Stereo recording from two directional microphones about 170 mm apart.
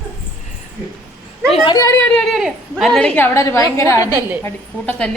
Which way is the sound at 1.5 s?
25° left (ahead or behind).